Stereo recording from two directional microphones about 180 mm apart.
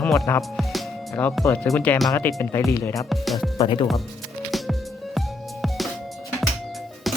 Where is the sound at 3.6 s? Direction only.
30° left (ahead or behind).